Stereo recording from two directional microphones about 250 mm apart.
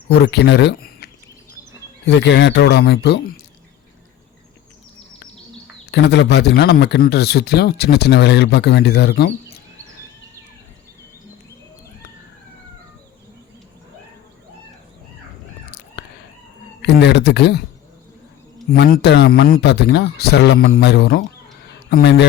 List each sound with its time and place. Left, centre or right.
0.1 s speech: left
5.9 s speech: left
16.8 s speech: left
18.7 s a man's voice: left